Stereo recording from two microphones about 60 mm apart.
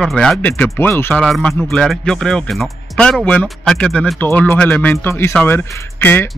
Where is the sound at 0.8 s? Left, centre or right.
Left.